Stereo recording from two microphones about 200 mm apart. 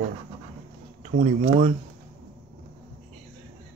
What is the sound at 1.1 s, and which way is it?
Speech, 35° right (ahead or behind).